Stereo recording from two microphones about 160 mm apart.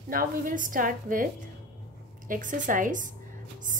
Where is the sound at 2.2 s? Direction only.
55° right (ahead or behind).